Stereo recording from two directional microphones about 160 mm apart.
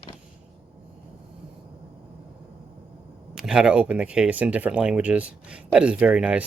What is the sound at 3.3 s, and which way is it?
Speech, 5° right (ahead or behind).